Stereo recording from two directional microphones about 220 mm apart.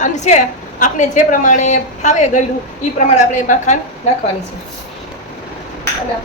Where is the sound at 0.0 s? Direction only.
35° left (ahead or behind).